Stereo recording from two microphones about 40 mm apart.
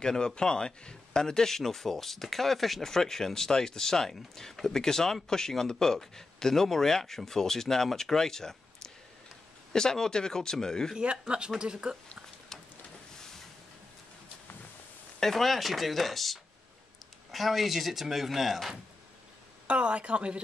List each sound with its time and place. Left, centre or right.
0.0 s speech: centre
11.0 s speech: right
15.3 s speech: centre
19.7 s speech: right